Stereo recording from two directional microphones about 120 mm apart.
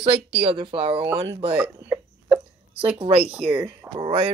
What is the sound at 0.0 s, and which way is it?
Speech, 60° right (ahead or behind).